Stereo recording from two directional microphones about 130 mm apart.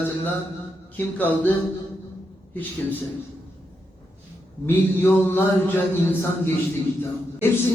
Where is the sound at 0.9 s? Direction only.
15° left (ahead or behind).